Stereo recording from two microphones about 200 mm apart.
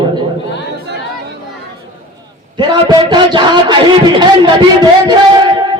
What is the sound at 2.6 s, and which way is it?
A man's voice, 20° right (ahead or behind).